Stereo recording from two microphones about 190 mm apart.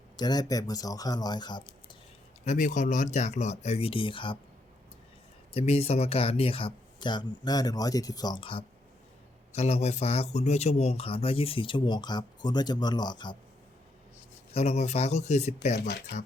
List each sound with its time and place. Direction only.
0.2 s speech: 20° left (ahead or behind)
2.4 s speech: 40° left (ahead or behind)
5.5 s speech: 30° left (ahead or behind)
14.5 s speech: 35° left (ahead or behind)
15.9 s speech: 60° left (ahead or behind)